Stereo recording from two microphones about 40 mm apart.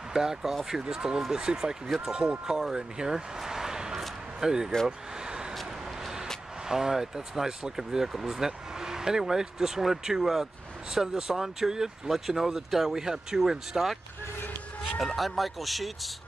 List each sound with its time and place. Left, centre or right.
0.1 s speech: centre
1.9 s speech: centre
2.1 s speech: centre
5.5 s vehicle: centre
6.6 s speech: centre
15.1 s speech: centre